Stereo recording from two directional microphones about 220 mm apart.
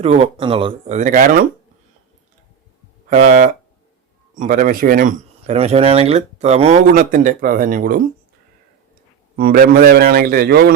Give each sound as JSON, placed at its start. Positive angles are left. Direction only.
{"t": 0.0, "sound": "speech", "side_deg": -25}
{"t": 3.1, "sound": "speech", "side_deg": -35}
{"t": 9.3, "sound": "a man's voice", "side_deg": -45}